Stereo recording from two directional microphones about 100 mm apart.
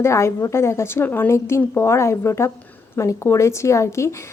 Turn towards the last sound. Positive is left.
turn(degrees=30)  # may be behind; listen again after turning